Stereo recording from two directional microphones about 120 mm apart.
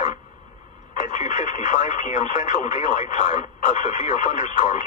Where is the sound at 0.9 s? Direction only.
90° left.